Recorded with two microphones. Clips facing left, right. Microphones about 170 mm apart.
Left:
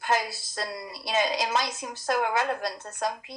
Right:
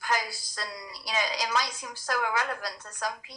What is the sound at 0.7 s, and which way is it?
Speech, 55° left (ahead or behind).